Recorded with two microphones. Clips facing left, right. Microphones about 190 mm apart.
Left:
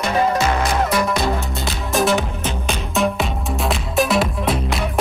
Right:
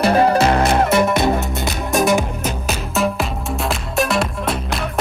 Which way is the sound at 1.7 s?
Centre (ahead or behind).